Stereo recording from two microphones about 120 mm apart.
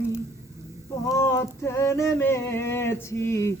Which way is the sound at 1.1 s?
20° left (ahead or behind).